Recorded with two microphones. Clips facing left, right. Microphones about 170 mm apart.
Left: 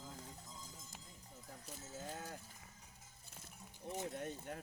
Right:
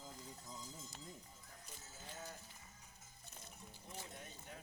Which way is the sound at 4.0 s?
55° left (ahead or behind).